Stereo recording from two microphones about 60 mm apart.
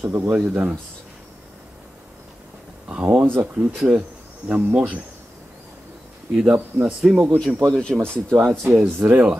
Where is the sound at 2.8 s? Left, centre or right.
Right.